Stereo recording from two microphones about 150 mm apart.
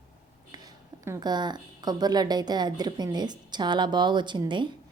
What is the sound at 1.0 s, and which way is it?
A woman's voice, 25° right (ahead or behind).